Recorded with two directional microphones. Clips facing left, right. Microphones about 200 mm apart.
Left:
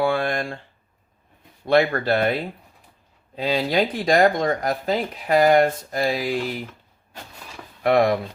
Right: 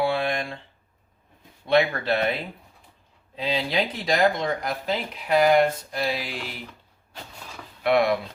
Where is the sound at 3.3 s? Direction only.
45° left (ahead or behind).